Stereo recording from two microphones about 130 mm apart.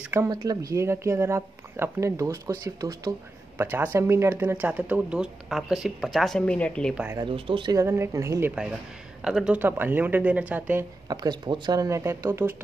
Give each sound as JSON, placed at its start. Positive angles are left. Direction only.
{"t": 0.3, "sound": "speech", "side_deg": -30}
{"t": 7.2, "sound": "speech", "side_deg": -40}
{"t": 7.7, "sound": "speech", "side_deg": -20}
{"t": 9.2, "sound": "speech", "side_deg": -5}
{"t": 11.1, "sound": "speech", "side_deg": -35}